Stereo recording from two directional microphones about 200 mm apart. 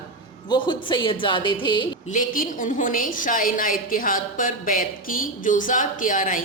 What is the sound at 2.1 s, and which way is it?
A woman's voice, 40° left (ahead or behind).